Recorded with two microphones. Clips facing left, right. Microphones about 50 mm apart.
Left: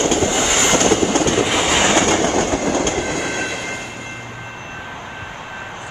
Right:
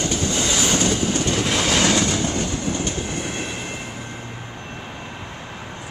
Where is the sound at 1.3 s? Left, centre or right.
Left.